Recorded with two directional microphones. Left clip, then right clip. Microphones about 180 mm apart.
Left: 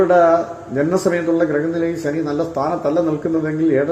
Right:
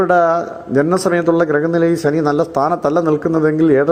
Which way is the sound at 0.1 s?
25° right (ahead or behind).